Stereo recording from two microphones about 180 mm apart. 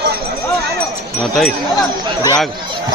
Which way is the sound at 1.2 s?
Centre (ahead or behind).